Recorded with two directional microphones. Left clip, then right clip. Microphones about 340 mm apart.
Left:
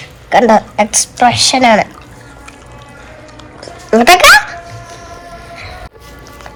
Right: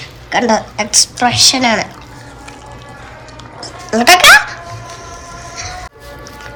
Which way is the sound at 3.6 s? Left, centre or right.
Centre.